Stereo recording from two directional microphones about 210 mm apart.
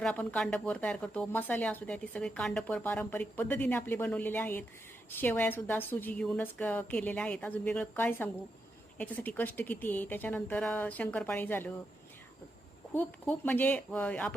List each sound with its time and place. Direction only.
0.0 s speech: 5° left (ahead or behind)
12.9 s speech: 10° left (ahead or behind)